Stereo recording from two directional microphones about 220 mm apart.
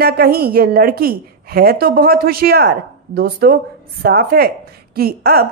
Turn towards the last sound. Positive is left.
turn(degrees=-45)  # may be behind; listen again after turning